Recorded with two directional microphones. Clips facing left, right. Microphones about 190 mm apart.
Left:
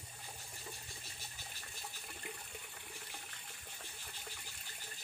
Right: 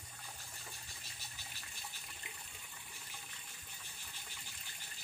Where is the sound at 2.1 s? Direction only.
50° left (ahead or behind).